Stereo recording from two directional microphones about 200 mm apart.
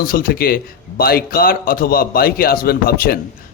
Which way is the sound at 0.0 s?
45° left (ahead or behind).